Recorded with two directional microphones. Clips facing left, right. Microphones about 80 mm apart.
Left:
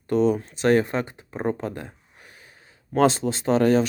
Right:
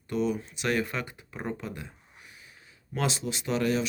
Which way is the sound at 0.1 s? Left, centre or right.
Left.